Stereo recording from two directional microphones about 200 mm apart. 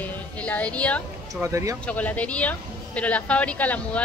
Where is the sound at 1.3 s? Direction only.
15° right (ahead or behind).